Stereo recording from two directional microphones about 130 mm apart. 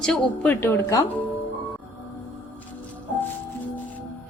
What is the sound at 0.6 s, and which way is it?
Speech, 25° left (ahead or behind).